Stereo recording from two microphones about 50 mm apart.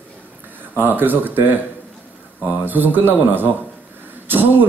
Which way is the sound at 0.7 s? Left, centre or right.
Right.